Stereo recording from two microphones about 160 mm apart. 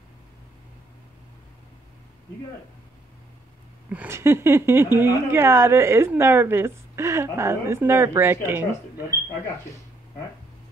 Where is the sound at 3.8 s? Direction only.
10° right (ahead or behind).